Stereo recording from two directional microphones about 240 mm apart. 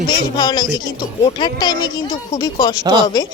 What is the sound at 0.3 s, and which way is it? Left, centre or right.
A woman's voice, centre.